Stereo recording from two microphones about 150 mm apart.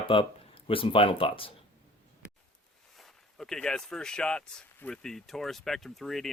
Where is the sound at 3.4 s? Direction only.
5° left (ahead or behind).